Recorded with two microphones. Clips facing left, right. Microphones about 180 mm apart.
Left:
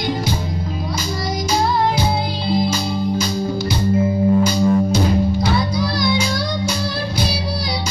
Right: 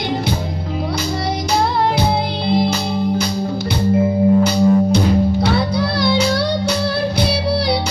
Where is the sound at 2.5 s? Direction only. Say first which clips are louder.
Right 2 dB; 65° right (ahead or behind).